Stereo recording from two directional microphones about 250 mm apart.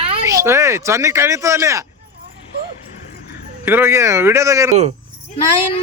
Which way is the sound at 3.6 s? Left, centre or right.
Centre.